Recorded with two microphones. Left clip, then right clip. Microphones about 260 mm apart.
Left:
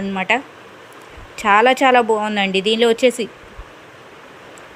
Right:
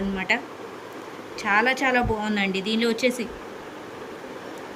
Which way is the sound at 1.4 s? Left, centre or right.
Centre.